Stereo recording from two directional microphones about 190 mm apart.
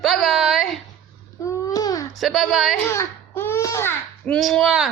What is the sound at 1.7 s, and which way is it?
Baby cry, 20° left (ahead or behind).